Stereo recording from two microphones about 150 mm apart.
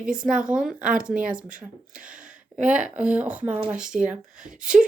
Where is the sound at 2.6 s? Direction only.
10° right (ahead or behind).